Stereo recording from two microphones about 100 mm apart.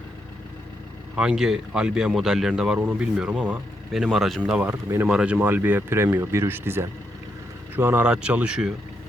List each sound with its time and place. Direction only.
1.1 s speech: 5° right (ahead or behind); by 8.0 s 20° right (ahead or behind)
8.0 s speech: 10° right (ahead or behind)